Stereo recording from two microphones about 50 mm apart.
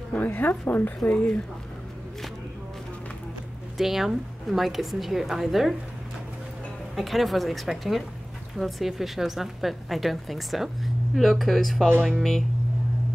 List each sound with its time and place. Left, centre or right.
0.1 s a woman's voice: left
1.0 s speech: left
3.7 s a woman's voice: centre
7.0 s a woman's voice: centre